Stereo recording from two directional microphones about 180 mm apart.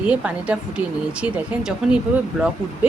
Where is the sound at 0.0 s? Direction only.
5° right (ahead or behind).